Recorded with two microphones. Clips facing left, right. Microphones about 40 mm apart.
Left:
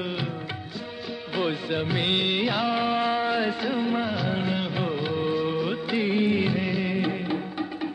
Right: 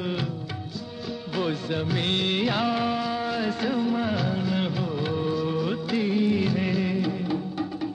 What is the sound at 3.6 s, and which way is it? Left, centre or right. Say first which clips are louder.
Music of bollywood: right 1 dB; left.